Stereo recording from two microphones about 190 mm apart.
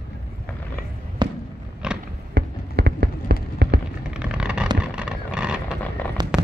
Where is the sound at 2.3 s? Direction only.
60° right (ahead or behind).